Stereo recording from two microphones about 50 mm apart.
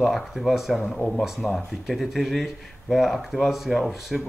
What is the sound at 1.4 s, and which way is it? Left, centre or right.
Speech, centre.